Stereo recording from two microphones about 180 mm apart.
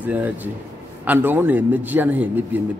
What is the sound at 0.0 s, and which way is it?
A man's voice, 10° right (ahead or behind).